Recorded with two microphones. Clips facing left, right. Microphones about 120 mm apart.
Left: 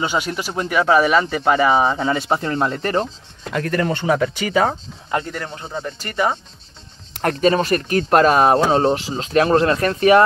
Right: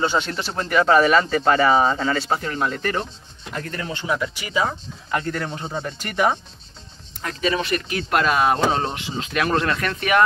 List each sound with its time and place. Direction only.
0.0 s speech: 10° left (ahead or behind); by 3.1 s 30° left (ahead or behind)
3.5 s speech: 75° left (ahead or behind); by 4.7 s 55° left (ahead or behind)
5.2 s speech: 10° left (ahead or behind)
5.5 s speech: 10° right (ahead or behind)
7.4 s speech: 40° left (ahead or behind)